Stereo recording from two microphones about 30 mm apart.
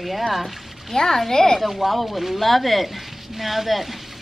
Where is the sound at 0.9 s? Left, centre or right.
Centre.